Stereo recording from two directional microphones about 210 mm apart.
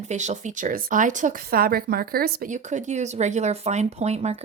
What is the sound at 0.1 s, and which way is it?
Speech, 35° right (ahead or behind).